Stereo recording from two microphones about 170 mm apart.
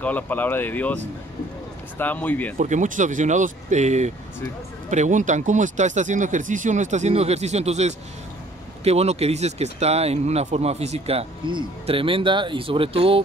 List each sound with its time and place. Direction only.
0.0 s speech: 10° left (ahead or behind)
2.5 s speech: 45° right (ahead or behind)